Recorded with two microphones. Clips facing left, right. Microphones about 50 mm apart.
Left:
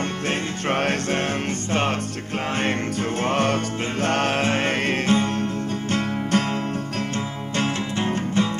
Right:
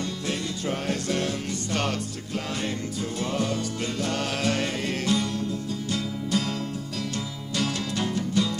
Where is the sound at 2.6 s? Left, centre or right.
Left.